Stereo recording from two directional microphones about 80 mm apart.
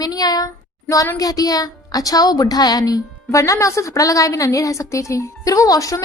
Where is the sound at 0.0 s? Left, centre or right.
Left.